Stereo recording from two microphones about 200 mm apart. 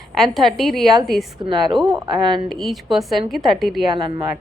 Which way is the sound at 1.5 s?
20° right (ahead or behind).